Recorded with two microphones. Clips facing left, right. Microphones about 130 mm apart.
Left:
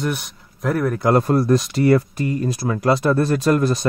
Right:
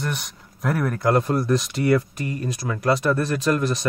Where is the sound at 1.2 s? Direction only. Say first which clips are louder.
Left 4 dB; 40° left (ahead or behind).